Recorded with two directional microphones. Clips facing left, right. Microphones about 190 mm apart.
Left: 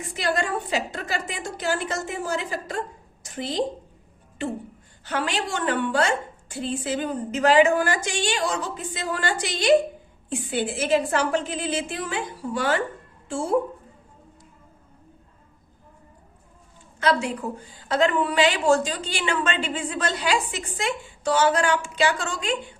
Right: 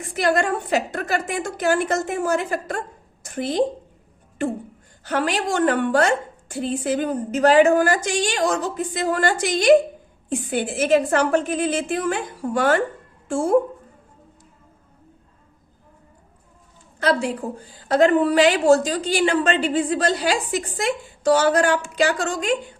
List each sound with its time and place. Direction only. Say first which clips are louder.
0.1 s a woman's voice: right 5 dB; 50° right (ahead or behind)
17.0 s a woman's voice: right 2 dB; 35° right (ahead or behind)